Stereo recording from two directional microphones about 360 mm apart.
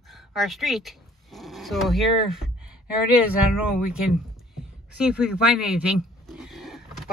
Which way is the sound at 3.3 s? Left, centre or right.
Left.